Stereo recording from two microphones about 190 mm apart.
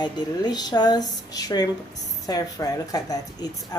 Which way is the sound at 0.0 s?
20° left (ahead or behind).